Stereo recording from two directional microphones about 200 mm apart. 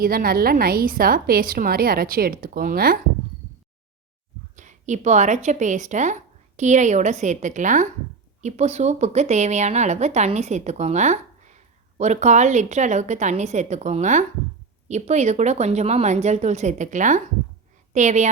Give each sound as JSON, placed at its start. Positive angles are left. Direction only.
{"t": 0.0, "sound": "a woman's voice", "side_deg": -50}
{"t": 4.5, "sound": "a woman's voice", "side_deg": -40}